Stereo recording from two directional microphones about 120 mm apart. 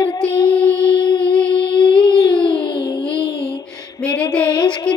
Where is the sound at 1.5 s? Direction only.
40° left (ahead or behind).